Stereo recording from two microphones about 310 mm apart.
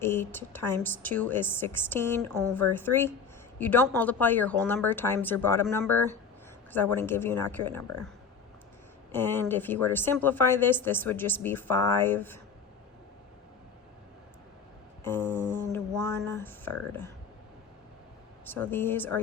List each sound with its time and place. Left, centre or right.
0.0 s a woman's voice: centre
9.1 s a woman's voice: centre
15.0 s a woman's voice: centre
18.4 s a woman's voice: centre